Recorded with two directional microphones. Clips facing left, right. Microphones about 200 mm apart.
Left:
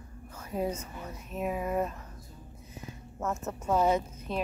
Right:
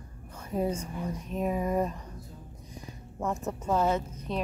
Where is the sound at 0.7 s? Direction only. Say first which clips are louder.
Right 4 dB; 10° right (ahead or behind).